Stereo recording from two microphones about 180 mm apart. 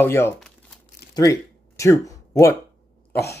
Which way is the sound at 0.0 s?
10° left (ahead or behind).